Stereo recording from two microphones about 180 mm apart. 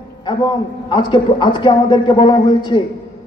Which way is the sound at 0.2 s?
25° left (ahead or behind).